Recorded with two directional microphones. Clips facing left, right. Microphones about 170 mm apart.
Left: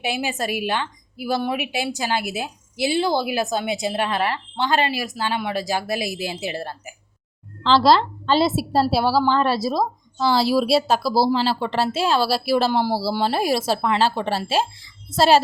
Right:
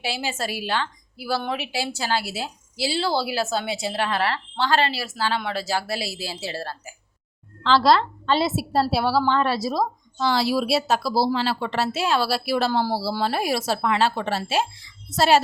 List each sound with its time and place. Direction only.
0.0 s a woman's voice: 15° left (ahead or behind)
7.6 s speech: 30° left (ahead or behind)